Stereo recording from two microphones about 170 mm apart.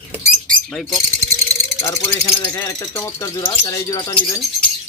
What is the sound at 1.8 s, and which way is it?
Speech, 15° left (ahead or behind).